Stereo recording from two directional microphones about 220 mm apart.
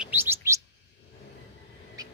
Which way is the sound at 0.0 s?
10° right (ahead or behind).